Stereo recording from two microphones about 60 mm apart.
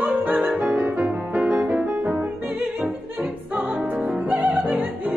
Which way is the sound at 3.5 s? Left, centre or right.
Centre.